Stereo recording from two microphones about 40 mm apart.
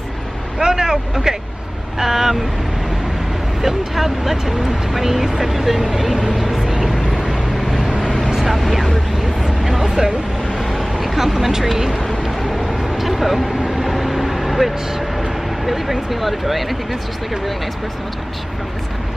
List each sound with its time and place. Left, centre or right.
0.6 s speech: centre
3.6 s speech: centre
6.3 s vehicle: centre
8.5 s speech: centre
10.6 s vehicle: centre
12.7 s a sound: centre
13.7 s vehicle: centre